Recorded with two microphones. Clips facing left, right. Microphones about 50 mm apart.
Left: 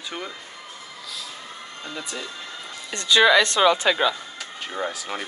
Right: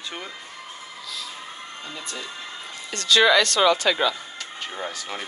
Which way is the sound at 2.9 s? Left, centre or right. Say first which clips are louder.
Left 1 dB; centre.